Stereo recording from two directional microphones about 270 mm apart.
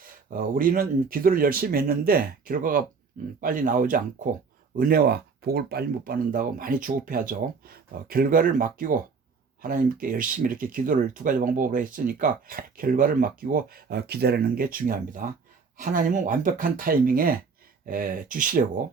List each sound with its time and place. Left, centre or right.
0.0 s speech: right